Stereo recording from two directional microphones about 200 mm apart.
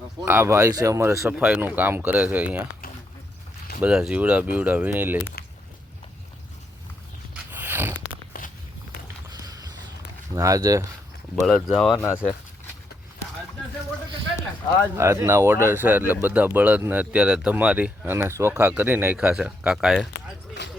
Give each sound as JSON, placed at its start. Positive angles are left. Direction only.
{"t": 0.3, "sound": "speech", "side_deg": -10}
{"t": 3.8, "sound": "speech", "side_deg": -5}
{"t": 7.5, "sound": "a sound", "side_deg": -10}
{"t": 8.3, "sound": "walk", "side_deg": 45}
{"t": 9.3, "sound": "a sound", "side_deg": -20}
{"t": 10.3, "sound": "speech", "side_deg": -15}
{"t": 11.7, "sound": "speech", "side_deg": 0}
{"t": 11.9, "sound": "speech", "side_deg": 10}
{"t": 14.9, "sound": "speech", "side_deg": -15}